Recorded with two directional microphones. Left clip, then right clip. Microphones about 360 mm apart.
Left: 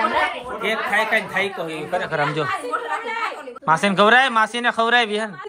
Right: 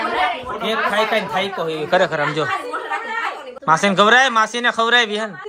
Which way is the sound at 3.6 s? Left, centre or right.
Centre.